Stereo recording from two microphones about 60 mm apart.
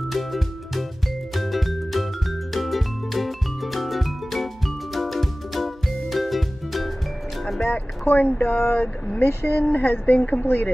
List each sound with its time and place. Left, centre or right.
0.1 s music: centre
7.6 s speech: left
10.4 s speech: left